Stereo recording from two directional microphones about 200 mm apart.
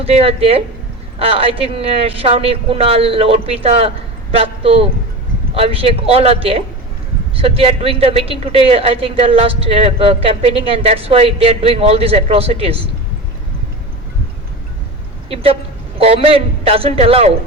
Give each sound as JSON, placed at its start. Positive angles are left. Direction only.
{"t": 0.0, "sound": "a woman's voice", "side_deg": -30}
{"t": 15.3, "sound": "a woman's voice", "side_deg": -30}